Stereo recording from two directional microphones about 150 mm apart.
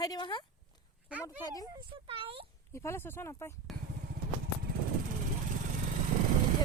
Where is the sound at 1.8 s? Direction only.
35° right (ahead or behind).